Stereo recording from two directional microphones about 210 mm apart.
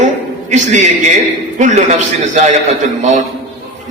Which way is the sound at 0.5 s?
35° right (ahead or behind).